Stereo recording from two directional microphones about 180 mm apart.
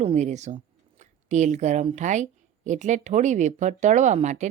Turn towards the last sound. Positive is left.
turn(degrees=-40)  # may be behind; listen again after turning